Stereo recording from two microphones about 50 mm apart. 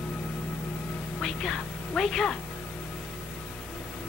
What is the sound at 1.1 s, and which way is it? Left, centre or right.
A woman's voice, centre.